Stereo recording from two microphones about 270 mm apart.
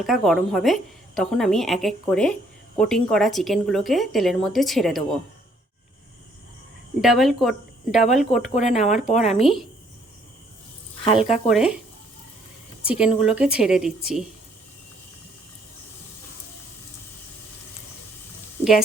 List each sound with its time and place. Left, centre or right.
0.0 s a woman's voice: centre
7.0 s a woman's voice: centre
8.2 s speech: left
9.3 s a woman's voice: centre
11.0 s speech: left
11.4 s a woman's voice: centre
12.8 s a woman's voice: centre